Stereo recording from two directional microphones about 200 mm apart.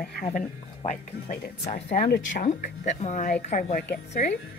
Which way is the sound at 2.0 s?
50° left (ahead or behind).